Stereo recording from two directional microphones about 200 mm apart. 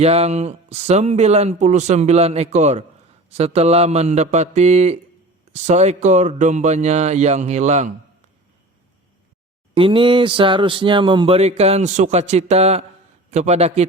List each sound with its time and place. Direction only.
0.0 s speech: 30° right (ahead or behind)
9.7 s a sound: 25° right (ahead or behind)
13.3 s speech: 35° right (ahead or behind)